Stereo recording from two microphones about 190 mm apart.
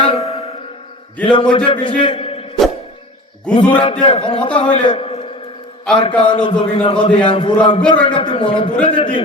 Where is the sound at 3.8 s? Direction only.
25° left (ahead or behind).